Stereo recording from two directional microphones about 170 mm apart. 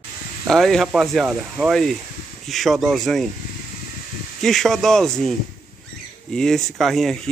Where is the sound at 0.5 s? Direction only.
Centre (ahead or behind).